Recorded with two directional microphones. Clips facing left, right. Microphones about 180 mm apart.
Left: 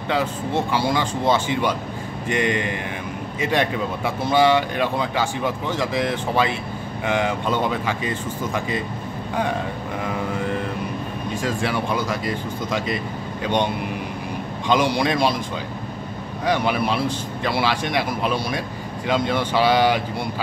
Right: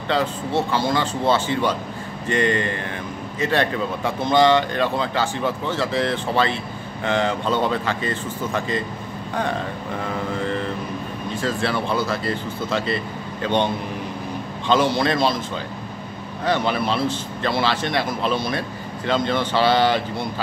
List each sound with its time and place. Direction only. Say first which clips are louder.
0.1 s speech: right 1 dB; 10° left (ahead or behind)
11.3 s speech: right 1 dB; 10° left (ahead or behind)
14.7 s speech: right 1 dB; 15° left (ahead or behind)
16.4 s speech: even; 10° left (ahead or behind)